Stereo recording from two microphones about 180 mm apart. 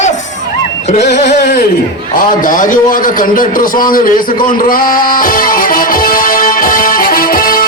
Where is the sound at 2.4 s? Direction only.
50° left (ahead or behind).